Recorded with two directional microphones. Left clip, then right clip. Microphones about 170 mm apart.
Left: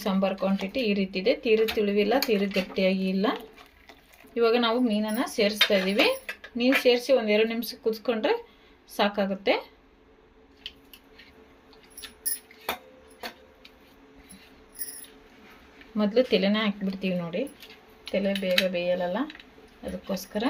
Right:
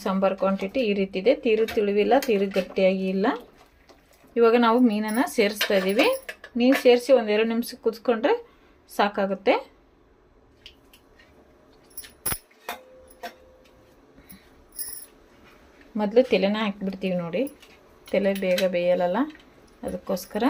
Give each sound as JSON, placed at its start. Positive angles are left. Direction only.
{"t": 0.0, "sound": "speech", "side_deg": -10}
{"t": 4.4, "sound": "speech", "side_deg": -10}
{"t": 4.9, "sound": "speech", "side_deg": -25}
{"t": 5.4, "sound": "speech", "side_deg": -15}
{"t": 16.0, "sound": "speech", "side_deg": -5}